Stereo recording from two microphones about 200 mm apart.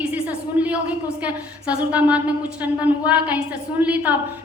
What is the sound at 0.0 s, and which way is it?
A woman's voice, 5° right (ahead or behind).